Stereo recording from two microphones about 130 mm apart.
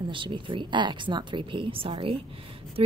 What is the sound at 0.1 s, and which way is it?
A woman's voice, 40° right (ahead or behind).